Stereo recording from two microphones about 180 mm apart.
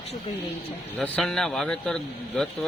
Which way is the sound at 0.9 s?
5° left (ahead or behind).